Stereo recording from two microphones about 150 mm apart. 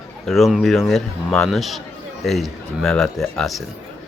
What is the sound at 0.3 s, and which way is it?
Speech, centre (ahead or behind).